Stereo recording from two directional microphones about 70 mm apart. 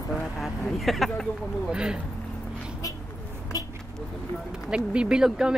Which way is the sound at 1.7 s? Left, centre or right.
Centre.